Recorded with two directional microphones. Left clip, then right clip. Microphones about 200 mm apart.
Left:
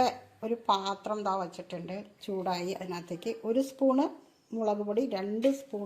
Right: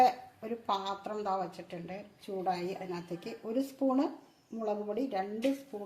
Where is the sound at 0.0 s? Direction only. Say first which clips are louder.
Right 2 dB; 30° left (ahead or behind).